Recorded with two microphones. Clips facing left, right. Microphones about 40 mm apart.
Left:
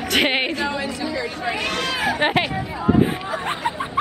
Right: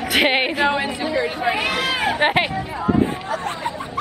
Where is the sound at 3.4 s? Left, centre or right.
Left.